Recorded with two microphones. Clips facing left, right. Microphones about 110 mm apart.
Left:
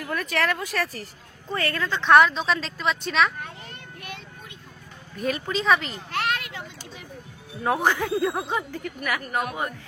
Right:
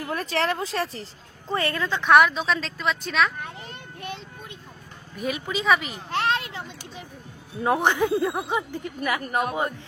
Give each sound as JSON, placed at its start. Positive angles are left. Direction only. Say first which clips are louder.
{"t": 0.0, "sound": "speech", "louder": "even", "side_deg": -30}
{"t": 2.0, "sound": "speech", "louder": "left 1 dB", "side_deg": -5}
{"t": 5.2, "sound": "speech", "louder": "left 1 dB", "side_deg": -5}
{"t": 6.1, "sound": "children playing", "louder": "right 3 dB", "side_deg": -25}
{"t": 7.6, "sound": "speech", "louder": "right 2 dB", "side_deg": -20}